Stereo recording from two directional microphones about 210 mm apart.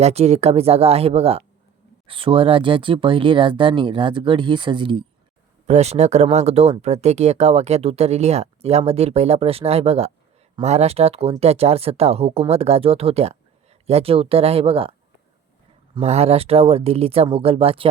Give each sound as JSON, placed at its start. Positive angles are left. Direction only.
{"t": 0.0, "sound": "speech", "side_deg": -30}
{"t": 16.0, "sound": "speech", "side_deg": -30}